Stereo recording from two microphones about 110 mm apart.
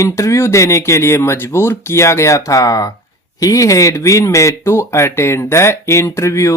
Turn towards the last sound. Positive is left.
turn(degrees=25)  # may be behind; listen again after turning